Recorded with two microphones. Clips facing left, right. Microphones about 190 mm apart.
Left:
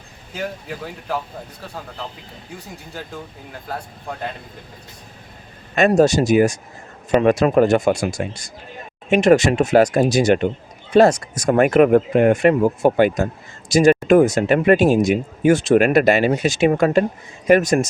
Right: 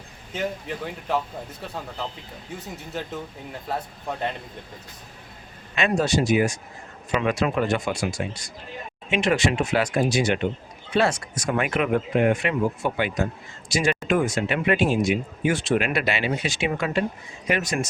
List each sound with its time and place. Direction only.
0.3 s speech: centre (ahead or behind)
2.7 s speech: centre (ahead or behind)
5.7 s speech: 45° left (ahead or behind)